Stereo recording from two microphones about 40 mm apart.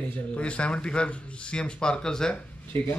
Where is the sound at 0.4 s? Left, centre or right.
Left.